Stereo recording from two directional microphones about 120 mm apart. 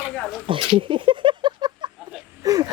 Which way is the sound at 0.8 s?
45° right (ahead or behind).